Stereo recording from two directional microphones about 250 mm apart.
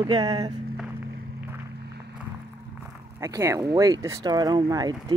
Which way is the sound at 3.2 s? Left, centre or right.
Centre.